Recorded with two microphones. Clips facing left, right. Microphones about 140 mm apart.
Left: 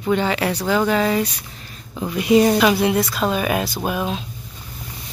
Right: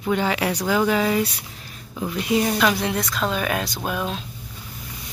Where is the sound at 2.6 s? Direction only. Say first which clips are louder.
Left 5 dB; 10° left (ahead or behind).